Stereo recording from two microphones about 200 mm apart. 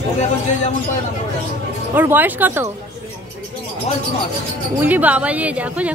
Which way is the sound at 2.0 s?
10° right (ahead or behind).